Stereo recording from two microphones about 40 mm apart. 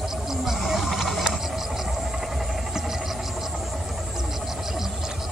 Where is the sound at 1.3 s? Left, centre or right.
Centre.